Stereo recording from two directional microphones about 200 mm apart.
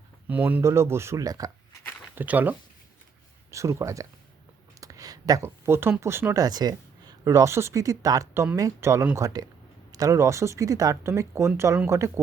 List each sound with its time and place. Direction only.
0.3 s speech: 10° right (ahead or behind)